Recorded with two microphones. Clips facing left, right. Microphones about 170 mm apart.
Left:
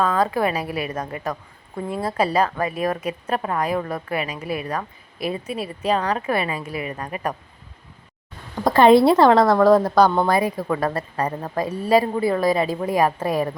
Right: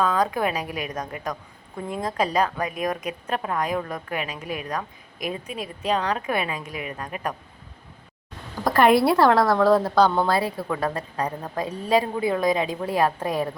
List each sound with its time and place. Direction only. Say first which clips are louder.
0.0 s a woman's voice: left 2 dB; centre (ahead or behind)
8.6 s a woman's voice: left 5 dB; 25° left (ahead or behind); by 13.5 s 10° left (ahead or behind)